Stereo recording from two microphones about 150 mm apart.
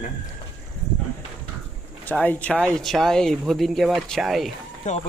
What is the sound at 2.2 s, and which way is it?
Speech, 10° left (ahead or behind).